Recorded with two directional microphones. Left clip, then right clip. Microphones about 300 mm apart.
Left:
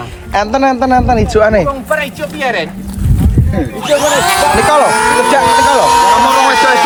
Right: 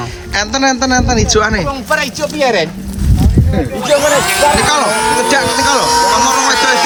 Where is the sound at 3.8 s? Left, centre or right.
Centre.